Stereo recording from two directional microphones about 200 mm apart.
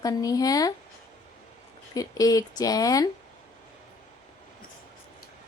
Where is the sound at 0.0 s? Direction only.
20° left (ahead or behind).